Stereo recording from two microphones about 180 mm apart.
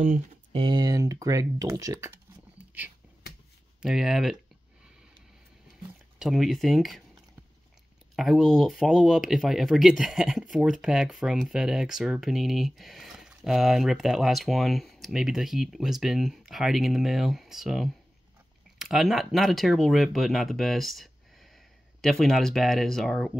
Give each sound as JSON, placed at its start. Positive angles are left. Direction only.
{"t": 0.5, "sound": "speech", "side_deg": -25}
{"t": 3.8, "sound": "speech", "side_deg": 0}
{"t": 6.1, "sound": "speech", "side_deg": 0}
{"t": 8.2, "sound": "speech", "side_deg": 0}